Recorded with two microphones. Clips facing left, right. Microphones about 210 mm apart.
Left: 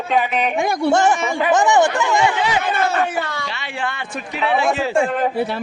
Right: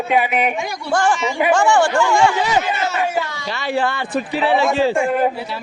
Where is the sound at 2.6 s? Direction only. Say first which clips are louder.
Left 2 dB; 55° left (ahead or behind).